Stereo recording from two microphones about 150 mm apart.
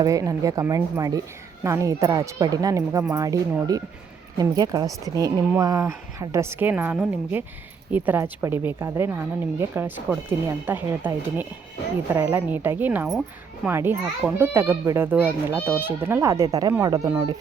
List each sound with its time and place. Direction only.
0.0 s speech: 25° right (ahead or behind)